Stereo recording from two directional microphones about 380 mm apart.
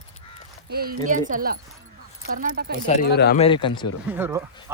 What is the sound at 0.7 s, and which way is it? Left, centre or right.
Speech, right.